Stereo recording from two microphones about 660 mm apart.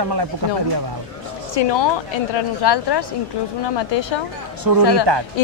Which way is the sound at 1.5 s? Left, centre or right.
Left.